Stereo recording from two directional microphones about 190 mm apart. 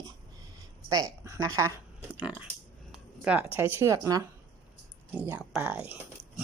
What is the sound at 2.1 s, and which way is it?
Speech, 5° right (ahead or behind).